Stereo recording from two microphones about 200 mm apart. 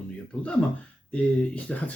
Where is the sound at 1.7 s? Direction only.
5° left (ahead or behind).